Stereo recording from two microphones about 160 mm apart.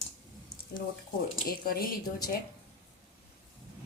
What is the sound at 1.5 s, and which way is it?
Speech, 70° left (ahead or behind).